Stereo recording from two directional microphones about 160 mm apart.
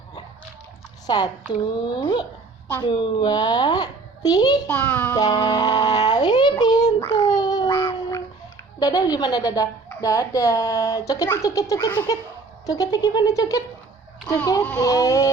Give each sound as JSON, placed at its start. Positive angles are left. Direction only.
{"t": 1.0, "sound": "a woman's voice", "side_deg": 25}
{"t": 4.7, "sound": "child singing", "side_deg": 10}
{"t": 5.1, "sound": "a child's voice", "side_deg": 25}
{"t": 7.0, "sound": "babbling", "side_deg": 20}
{"t": 8.8, "sound": "speech", "side_deg": 25}